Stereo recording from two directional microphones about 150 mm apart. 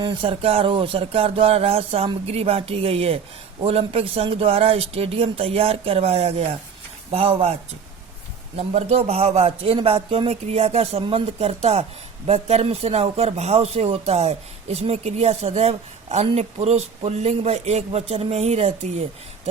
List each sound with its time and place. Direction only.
0.0 s a man's voice: 35° right (ahead or behind)